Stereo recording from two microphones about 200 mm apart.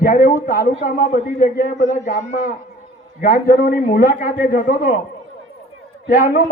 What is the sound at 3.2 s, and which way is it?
A man's voice, 45° left (ahead or behind).